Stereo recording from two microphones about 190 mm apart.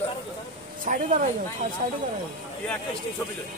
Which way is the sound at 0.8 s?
45° right (ahead or behind).